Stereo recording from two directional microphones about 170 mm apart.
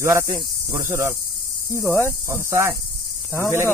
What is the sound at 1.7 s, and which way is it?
Speech, 15° left (ahead or behind).